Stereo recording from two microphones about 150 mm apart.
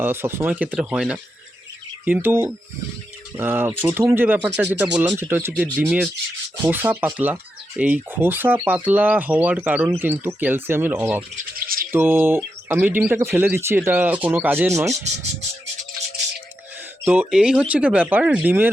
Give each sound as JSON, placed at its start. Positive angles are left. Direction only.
{"t": 0.0, "sound": "speech", "side_deg": -15}
{"t": 5.8, "sound": "rub", "side_deg": -5}
{"t": 6.7, "sound": "speech", "side_deg": -15}
{"t": 11.5, "sound": "bird", "side_deg": -75}
{"t": 11.9, "sound": "speech", "side_deg": -15}
{"t": 17.0, "sound": "speech", "side_deg": -10}